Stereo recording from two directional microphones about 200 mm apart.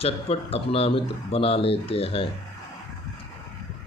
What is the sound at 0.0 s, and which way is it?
Speech, 30° left (ahead or behind).